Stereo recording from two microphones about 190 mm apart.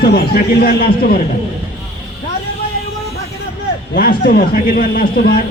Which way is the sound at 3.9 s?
50° left (ahead or behind).